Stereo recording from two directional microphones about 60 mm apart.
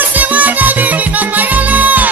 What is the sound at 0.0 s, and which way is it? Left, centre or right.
Music, right.